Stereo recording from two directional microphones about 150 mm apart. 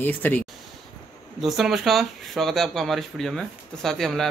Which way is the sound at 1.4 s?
Centre (ahead or behind).